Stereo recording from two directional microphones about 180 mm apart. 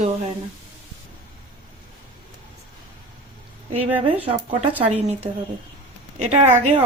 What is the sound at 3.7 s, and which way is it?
Speech, 30° right (ahead or behind).